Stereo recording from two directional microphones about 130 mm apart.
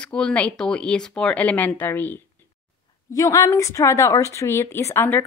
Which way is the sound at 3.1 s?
25° left (ahead or behind).